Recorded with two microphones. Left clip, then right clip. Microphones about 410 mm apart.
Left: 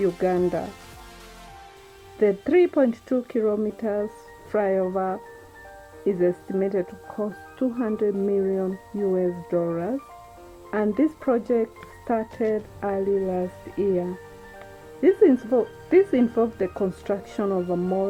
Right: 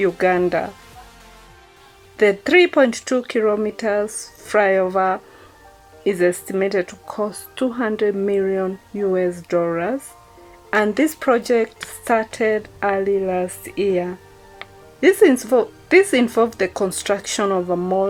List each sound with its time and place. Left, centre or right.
0.0 s speech: right
2.1 s speech: right